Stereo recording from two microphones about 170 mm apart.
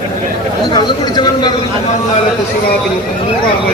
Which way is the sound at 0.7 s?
25° left (ahead or behind).